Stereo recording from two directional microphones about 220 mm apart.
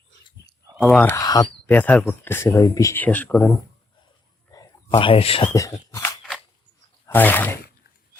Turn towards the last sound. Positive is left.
turn(degrees=10)  # may be behind; listen again after turning